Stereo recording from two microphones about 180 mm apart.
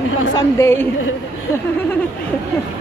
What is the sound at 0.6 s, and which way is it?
Speech, 15° left (ahead or behind).